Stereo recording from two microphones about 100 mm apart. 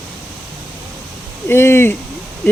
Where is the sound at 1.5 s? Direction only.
25° left (ahead or behind).